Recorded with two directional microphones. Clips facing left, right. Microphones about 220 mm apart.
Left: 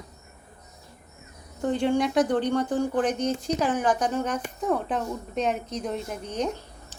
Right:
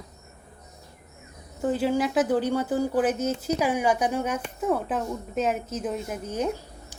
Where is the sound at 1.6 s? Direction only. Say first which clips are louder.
Even; 5° right (ahead or behind).